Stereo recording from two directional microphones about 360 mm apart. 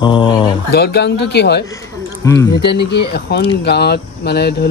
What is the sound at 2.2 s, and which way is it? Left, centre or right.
Speech, centre.